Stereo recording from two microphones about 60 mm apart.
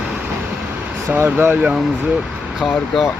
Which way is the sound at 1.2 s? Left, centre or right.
Right.